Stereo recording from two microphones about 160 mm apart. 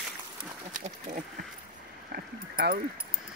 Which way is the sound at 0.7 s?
55° right (ahead or behind).